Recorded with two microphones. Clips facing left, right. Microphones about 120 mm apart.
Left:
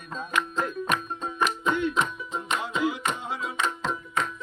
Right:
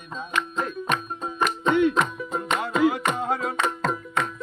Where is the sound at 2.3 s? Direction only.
50° right (ahead or behind).